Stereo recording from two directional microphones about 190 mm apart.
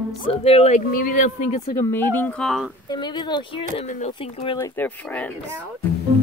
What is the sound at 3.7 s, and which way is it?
Speech, 35° left (ahead or behind).